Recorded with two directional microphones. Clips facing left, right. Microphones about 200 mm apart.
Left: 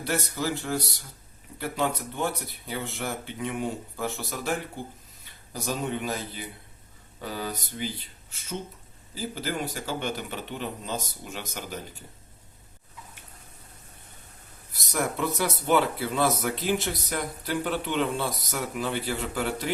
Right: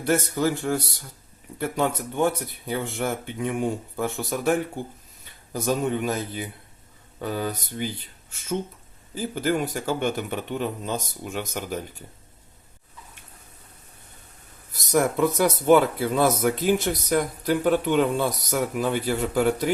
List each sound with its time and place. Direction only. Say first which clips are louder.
0.0 s speech: right 7 dB; 50° right (ahead or behind)
15.4 s speech: right 6 dB; 45° right (ahead or behind)